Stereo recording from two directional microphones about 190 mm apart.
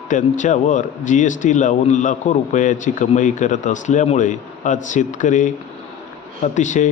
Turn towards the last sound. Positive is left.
turn(degrees=40)  # may be behind; listen again after turning